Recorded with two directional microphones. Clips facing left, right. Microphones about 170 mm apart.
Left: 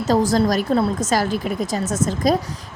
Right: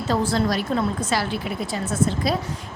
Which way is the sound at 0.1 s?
40° left (ahead or behind).